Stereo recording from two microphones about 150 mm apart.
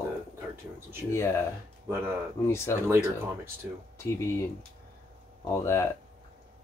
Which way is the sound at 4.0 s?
20° left (ahead or behind).